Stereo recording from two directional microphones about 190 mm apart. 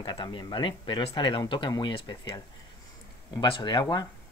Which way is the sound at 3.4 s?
25° left (ahead or behind).